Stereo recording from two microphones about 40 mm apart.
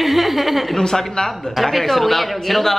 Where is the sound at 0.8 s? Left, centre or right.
Centre.